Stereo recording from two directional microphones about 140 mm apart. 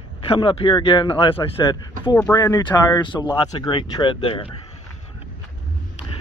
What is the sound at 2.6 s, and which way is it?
Speech, 30° left (ahead or behind).